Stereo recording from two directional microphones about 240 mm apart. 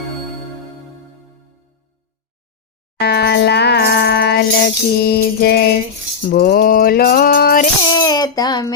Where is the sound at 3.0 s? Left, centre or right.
Left.